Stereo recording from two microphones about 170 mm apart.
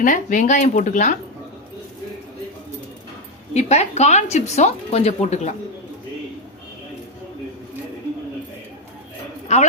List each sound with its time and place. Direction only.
0.0 s speech: 50° left (ahead or behind)
3.5 s speech: 40° left (ahead or behind)
9.5 s speech: 40° left (ahead or behind)